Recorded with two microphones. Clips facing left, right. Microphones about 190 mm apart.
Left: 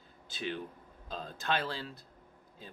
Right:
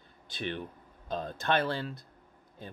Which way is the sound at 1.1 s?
60° right (ahead or behind).